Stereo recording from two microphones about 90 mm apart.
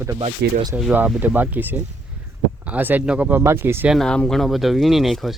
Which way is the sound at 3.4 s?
30° right (ahead or behind).